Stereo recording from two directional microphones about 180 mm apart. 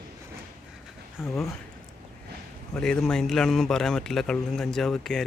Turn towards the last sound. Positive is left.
turn(degrees=0)  # may be behind; listen again after turning